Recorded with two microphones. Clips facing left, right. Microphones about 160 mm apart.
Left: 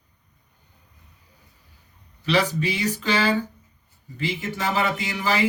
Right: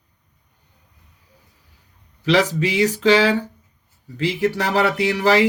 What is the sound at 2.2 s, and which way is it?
Speech, 90° right.